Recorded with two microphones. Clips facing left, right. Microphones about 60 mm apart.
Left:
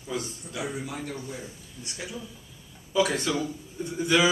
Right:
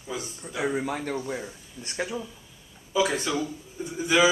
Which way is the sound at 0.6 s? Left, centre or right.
Right.